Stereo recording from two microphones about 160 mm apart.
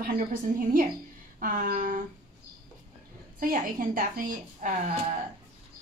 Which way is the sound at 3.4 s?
60° right (ahead or behind).